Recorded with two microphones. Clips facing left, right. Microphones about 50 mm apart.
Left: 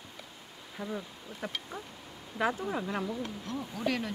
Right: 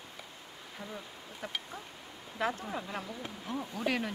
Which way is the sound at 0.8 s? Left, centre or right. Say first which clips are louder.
Left 7 dB; centre.